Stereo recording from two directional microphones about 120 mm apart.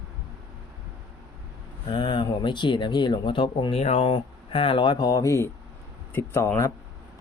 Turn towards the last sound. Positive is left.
turn(degrees=20)  # may be behind; listen again after turning